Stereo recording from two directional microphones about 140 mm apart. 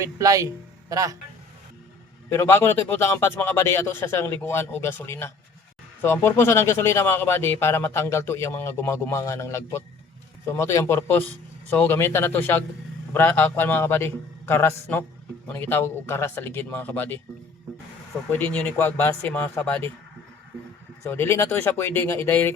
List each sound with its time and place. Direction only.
0.0 s speech: 25° right (ahead or behind)
2.3 s speech: 15° left (ahead or behind)
18.3 s speech: 15° left (ahead or behind)
21.1 s speech: 20° left (ahead or behind)